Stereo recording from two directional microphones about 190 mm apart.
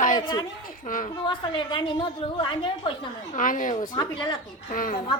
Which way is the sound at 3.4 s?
45° left (ahead or behind).